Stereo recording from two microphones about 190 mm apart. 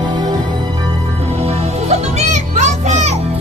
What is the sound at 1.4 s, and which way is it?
Music, 35° right (ahead or behind).